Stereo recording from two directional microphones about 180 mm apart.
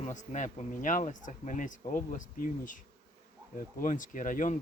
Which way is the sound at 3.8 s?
45° left (ahead or behind).